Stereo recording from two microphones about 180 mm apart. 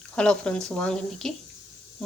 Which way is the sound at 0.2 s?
5° left (ahead or behind).